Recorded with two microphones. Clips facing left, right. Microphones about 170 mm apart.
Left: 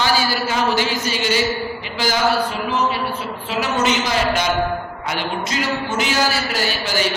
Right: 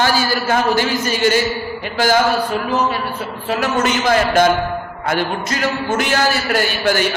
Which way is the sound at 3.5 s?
50° right (ahead or behind).